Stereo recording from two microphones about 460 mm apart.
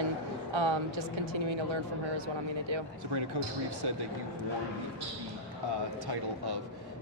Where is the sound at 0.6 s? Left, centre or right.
Right.